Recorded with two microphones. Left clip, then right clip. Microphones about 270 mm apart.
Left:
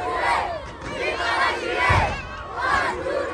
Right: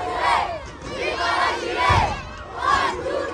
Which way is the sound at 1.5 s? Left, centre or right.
Right.